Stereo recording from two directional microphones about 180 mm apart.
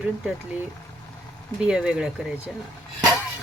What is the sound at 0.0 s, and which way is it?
Speech, 5° right (ahead or behind).